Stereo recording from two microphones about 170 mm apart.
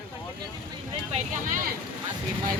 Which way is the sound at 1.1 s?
45° right (ahead or behind).